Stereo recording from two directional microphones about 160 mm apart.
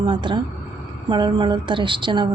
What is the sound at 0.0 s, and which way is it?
A woman's voice, 30° right (ahead or behind).